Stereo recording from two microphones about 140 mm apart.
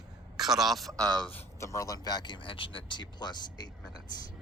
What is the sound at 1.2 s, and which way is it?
Speech, 15° left (ahead or behind).